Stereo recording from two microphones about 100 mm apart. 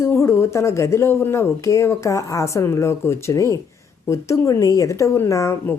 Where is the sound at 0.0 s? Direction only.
30° left (ahead or behind).